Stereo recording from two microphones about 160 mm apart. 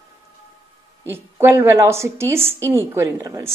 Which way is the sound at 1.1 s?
15° right (ahead or behind).